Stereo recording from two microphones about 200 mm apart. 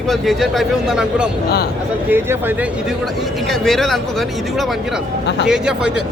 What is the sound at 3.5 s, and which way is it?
Speech, centre (ahead or behind).